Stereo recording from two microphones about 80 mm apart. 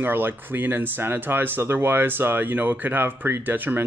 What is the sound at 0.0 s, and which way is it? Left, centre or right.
Speech, right.